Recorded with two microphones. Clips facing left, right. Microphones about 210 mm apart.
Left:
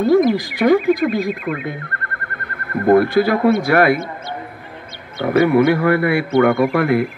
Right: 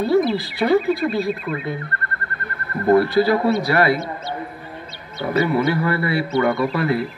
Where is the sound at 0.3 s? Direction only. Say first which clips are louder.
Left 3 dB; 15° left (ahead or behind).